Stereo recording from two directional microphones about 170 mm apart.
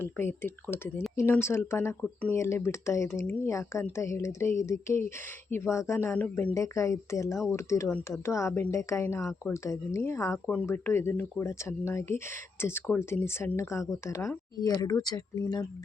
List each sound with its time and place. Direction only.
0.0 s speech: 15° left (ahead or behind)